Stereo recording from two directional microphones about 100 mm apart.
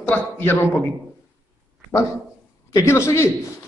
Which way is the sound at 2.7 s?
30° left (ahead or behind).